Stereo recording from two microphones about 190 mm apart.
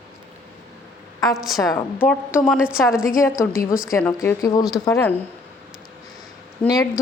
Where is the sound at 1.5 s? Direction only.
15° left (ahead or behind).